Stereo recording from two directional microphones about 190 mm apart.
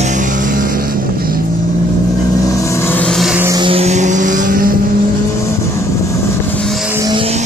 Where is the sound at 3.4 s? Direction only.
25° right (ahead or behind); by 4.7 s 50° right (ahead or behind).